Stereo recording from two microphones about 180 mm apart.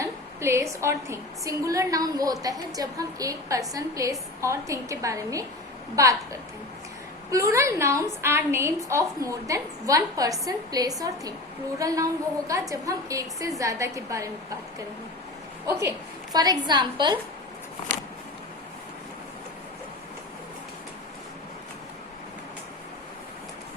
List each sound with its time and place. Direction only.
0.0 s a woman's voice: 15° right (ahead or behind)
7.3 s a woman's voice: 15° right (ahead or behind)
15.6 s a woman's voice: 20° right (ahead or behind)